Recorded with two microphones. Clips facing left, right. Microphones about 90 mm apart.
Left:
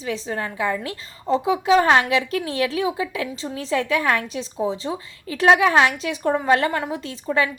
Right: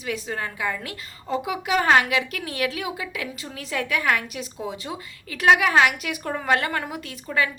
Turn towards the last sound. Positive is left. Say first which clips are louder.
# left 3 dB
turn(degrees=30)  # may be behind; listen again after turning